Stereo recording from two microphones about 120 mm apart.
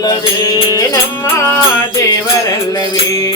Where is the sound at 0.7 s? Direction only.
30° left (ahead or behind).